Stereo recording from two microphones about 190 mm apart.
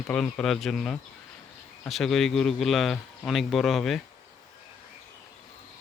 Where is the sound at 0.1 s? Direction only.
5° left (ahead or behind).